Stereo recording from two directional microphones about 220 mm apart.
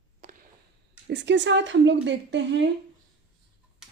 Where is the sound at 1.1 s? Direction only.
55° right (ahead or behind).